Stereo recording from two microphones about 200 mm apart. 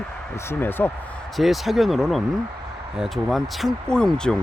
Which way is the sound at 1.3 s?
Centre (ahead or behind).